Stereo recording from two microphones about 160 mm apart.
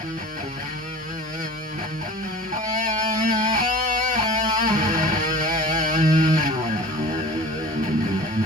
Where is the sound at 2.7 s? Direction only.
55° right (ahead or behind).